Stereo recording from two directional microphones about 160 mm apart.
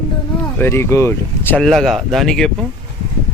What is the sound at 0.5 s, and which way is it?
Speech, 15° left (ahead or behind).